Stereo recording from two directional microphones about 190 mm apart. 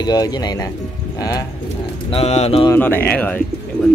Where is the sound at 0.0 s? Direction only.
20° left (ahead or behind).